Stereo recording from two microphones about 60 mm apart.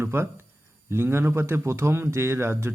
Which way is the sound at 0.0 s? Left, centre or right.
Right.